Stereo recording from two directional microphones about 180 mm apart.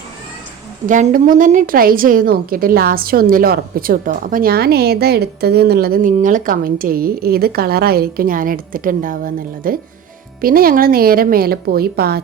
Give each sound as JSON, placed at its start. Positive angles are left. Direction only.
{"t": 0.9, "sound": "a woman's voice", "side_deg": -45}